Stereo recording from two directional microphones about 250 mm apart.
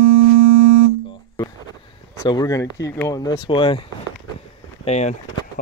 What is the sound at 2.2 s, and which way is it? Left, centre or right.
Speech, centre.